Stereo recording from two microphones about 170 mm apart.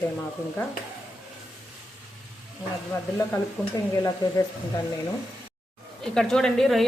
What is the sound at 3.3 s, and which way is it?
Stir, 20° left (ahead or behind).